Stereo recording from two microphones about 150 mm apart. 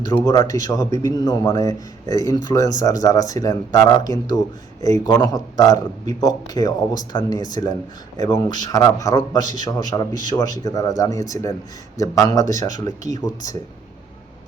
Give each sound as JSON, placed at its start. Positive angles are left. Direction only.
{"t": 0.0, "sound": "a man's voice", "side_deg": 25}